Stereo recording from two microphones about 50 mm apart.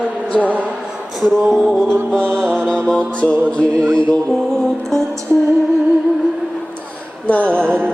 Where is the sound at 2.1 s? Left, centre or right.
Centre.